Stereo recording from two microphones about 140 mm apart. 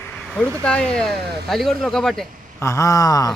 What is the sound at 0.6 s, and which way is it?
Speech, 5° left (ahead or behind).